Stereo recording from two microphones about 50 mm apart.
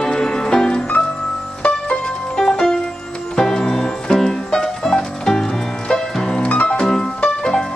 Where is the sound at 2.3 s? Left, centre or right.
Centre.